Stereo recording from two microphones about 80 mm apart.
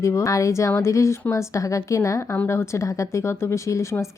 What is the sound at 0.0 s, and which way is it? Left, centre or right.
Speech, left.